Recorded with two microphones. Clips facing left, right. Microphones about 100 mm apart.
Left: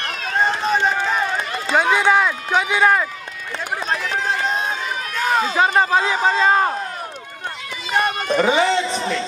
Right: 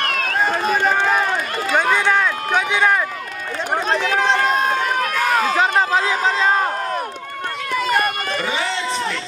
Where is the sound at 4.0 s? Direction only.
75° right (ahead or behind).